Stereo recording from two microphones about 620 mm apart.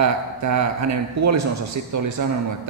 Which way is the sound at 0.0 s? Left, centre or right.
Right.